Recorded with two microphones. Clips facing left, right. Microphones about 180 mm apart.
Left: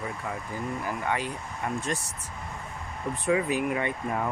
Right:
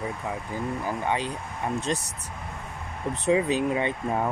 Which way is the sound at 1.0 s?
20° right (ahead or behind).